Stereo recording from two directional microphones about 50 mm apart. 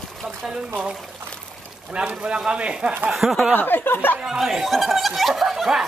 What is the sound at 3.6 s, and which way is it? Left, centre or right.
Speech, left.